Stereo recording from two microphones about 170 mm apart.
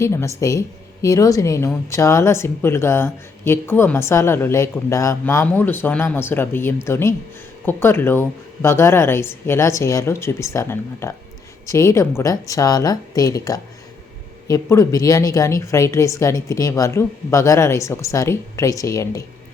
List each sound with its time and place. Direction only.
0.0 s a woman's voice: 15° left (ahead or behind)